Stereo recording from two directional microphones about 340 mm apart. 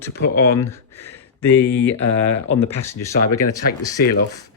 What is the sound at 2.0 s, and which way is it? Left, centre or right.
Speech, left.